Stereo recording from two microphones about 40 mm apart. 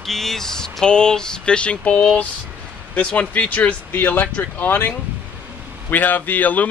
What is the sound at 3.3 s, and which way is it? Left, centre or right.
Speech, left.